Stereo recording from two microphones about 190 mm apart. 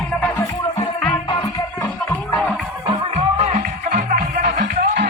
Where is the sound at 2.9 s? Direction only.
35° right (ahead or behind).